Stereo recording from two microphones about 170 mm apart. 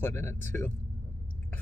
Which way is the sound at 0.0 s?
15° left (ahead or behind).